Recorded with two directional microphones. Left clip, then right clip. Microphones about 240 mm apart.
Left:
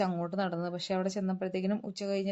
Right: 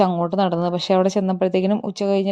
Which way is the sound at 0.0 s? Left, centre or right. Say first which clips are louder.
Right 14 dB; right.